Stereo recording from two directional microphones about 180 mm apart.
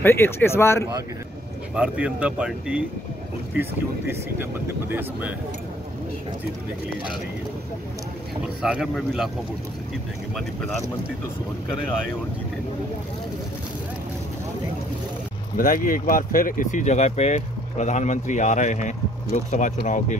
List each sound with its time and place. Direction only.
0.0 s speech: 15° left (ahead or behind)
1.8 s speech: 5° right (ahead or behind)
4.4 s speech: 10° right (ahead or behind)
8.6 s speech: 5° right (ahead or behind)
15.5 s speech: 50° left (ahead or behind)